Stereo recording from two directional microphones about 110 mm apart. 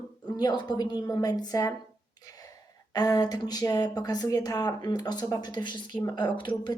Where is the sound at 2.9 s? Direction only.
35° left (ahead or behind).